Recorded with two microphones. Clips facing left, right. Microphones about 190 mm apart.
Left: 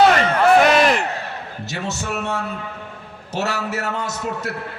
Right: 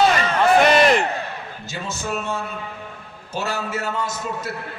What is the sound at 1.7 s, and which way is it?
A man's voice, 70° left (ahead or behind).